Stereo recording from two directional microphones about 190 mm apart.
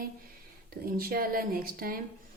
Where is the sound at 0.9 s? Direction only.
50° right (ahead or behind).